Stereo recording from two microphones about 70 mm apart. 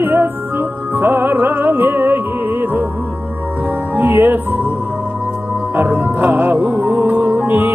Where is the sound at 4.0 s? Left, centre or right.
Right.